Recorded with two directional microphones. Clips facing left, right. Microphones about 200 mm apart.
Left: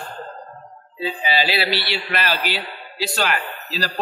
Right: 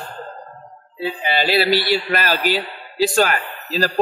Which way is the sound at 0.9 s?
60° right (ahead or behind).